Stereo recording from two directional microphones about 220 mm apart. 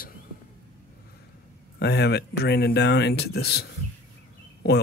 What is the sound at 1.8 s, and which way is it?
Speech, 50° left (ahead or behind).